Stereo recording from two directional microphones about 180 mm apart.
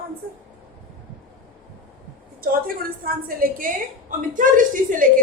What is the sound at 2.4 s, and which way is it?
A woman's voice, 55° right (ahead or behind).